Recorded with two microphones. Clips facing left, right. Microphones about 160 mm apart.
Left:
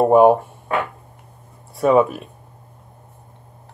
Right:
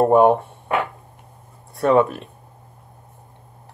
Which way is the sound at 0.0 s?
5° left (ahead or behind).